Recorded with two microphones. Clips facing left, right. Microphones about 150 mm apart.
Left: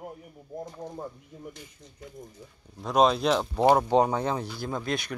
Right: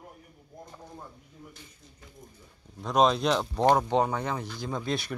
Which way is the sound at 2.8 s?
Centre (ahead or behind).